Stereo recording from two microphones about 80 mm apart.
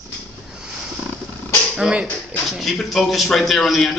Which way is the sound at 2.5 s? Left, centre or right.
Centre.